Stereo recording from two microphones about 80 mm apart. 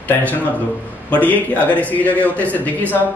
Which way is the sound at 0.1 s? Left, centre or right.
Left.